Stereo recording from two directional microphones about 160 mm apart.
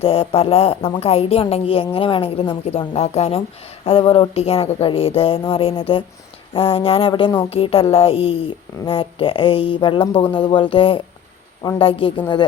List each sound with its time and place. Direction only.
0.0 s a woman's voice: 35° left (ahead or behind)